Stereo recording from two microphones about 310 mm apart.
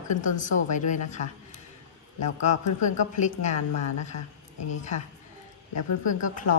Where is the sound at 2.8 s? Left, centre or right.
Left.